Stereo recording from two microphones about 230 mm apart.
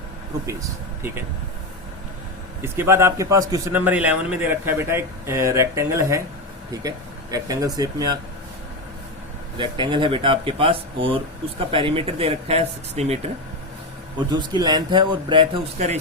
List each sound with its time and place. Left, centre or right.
2.6 s a man's voice: centre
9.6 s a man's voice: right
14.2 s a man's voice: centre